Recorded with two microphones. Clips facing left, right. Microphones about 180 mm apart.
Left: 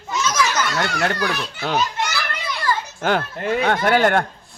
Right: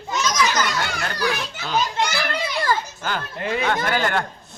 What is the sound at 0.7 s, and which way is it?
Speech, 70° left (ahead or behind).